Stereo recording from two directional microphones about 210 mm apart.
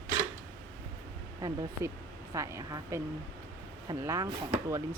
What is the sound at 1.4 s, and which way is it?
Speech, 15° right (ahead or behind).